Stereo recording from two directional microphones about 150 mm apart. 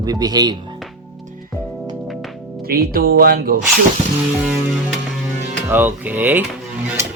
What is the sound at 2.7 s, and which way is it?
Speech, 80° right.